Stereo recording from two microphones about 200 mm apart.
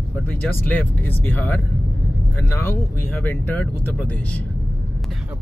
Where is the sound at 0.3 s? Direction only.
5° left (ahead or behind).